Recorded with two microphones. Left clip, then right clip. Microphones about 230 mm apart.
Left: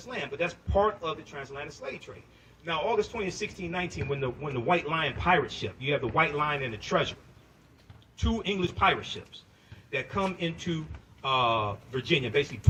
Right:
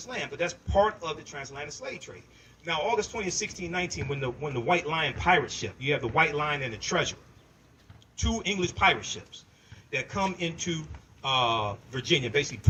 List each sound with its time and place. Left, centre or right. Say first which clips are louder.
0.2 s a man's voice: even; right
1.2 s speech: right 1 dB; centre
2.6 s a man's voice: even; right
8.2 s a man's voice: right 1 dB; right